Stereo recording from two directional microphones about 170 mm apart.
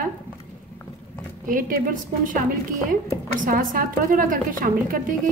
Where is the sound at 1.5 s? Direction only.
55° right (ahead or behind).